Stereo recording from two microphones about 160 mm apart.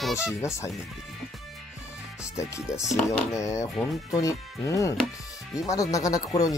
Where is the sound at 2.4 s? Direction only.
20° left (ahead or behind).